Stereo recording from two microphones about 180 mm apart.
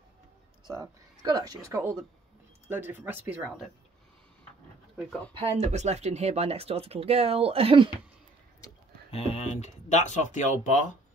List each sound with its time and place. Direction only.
0.7 s speech: 20° right (ahead or behind)
5.4 s speech: 35° right (ahead or behind)
9.1 s speech: 35° left (ahead or behind)